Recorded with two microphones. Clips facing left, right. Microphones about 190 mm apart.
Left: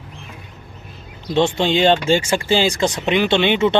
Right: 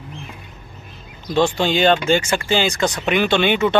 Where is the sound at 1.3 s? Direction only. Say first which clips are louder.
Left 1 dB; 25° left (ahead or behind).